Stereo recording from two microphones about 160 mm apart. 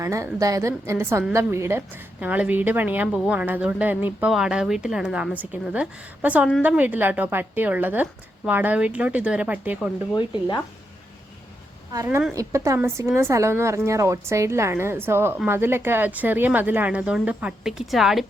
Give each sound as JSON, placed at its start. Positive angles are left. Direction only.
{"t": 0.0, "sound": "a woman's voice", "side_deg": -20}
{"t": 12.3, "sound": "a woman's voice", "side_deg": -20}